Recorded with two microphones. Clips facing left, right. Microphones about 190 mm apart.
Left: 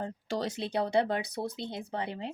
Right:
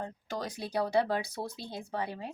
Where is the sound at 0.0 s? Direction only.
30° left (ahead or behind).